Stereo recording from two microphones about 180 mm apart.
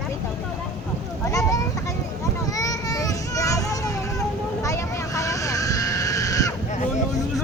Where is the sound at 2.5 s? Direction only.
20° left (ahead or behind).